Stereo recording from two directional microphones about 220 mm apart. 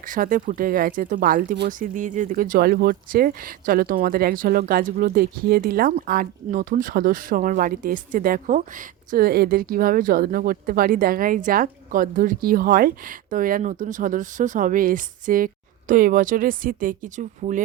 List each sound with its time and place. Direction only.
0.0 s speech: 40° right (ahead or behind)